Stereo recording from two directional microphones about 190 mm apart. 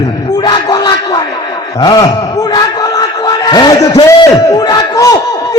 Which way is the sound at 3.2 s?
20° left (ahead or behind).